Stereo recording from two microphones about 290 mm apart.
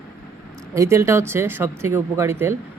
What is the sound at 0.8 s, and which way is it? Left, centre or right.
Speech, centre.